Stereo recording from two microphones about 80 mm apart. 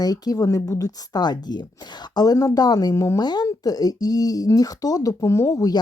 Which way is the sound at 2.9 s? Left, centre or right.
Left.